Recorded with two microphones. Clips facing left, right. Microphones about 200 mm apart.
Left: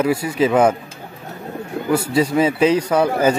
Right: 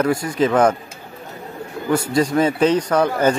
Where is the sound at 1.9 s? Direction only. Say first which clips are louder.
Even; 5° left (ahead or behind).